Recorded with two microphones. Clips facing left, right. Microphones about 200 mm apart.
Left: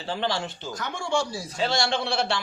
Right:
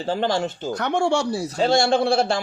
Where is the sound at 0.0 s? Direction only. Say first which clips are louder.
Right 6 dB; 45° right (ahead or behind); by 1.4 s 65° right (ahead or behind).